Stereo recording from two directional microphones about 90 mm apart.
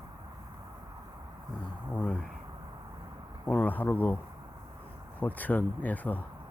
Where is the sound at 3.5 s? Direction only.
15° left (ahead or behind).